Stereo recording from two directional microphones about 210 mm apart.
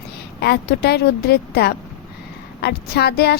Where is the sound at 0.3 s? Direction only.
50° left (ahead or behind).